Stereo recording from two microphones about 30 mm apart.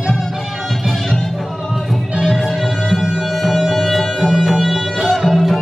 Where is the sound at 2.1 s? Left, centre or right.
Centre.